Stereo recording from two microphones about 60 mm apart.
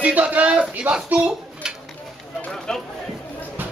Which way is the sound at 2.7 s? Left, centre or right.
Centre.